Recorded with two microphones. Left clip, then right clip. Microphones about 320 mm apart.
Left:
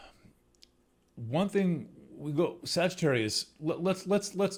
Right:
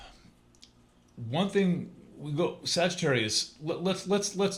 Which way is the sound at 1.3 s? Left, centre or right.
Left.